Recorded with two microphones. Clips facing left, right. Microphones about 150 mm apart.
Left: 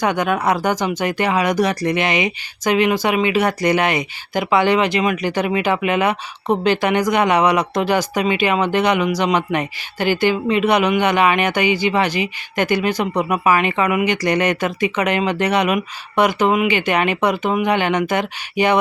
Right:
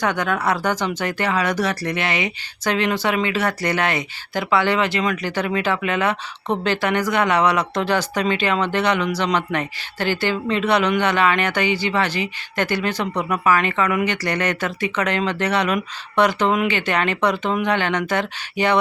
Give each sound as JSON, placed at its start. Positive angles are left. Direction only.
{"t": 0.0, "sound": "speech", "side_deg": 15}